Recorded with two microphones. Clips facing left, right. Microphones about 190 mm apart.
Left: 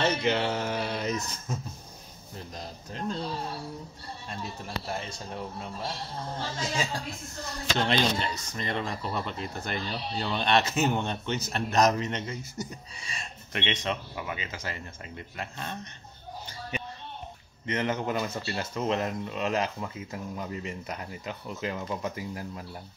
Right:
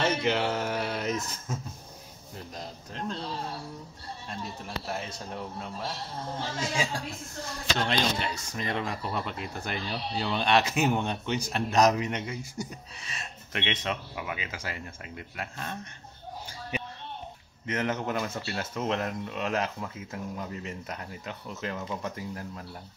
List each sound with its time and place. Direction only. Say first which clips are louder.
0.0 s speech: even; 5° right (ahead or behind)
4.3 s speech: left 1 dB; centre (ahead or behind)
6.6 s speech: right 1 dB; 10° right (ahead or behind)
8.3 s speech: even; 10° right (ahead or behind)
17.6 s speech: left 1 dB; centre (ahead or behind)